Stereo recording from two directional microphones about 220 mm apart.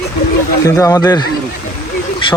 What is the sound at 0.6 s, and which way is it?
Speech, 15° left (ahead or behind).